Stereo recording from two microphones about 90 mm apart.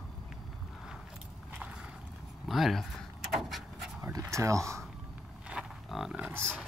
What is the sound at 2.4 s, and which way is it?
Pant, centre (ahead or behind).